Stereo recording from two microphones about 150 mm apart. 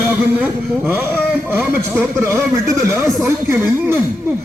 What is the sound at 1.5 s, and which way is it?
A man's voice, 15° right (ahead or behind).